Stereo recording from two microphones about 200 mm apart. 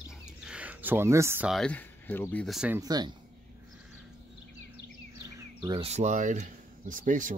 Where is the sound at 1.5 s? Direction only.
5° left (ahead or behind).